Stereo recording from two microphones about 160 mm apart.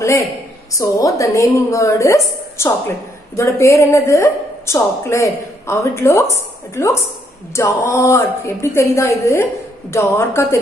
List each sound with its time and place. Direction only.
0.0 s a woman's voice: 20° left (ahead or behind)
3.3 s a woman's voice: 20° left (ahead or behind)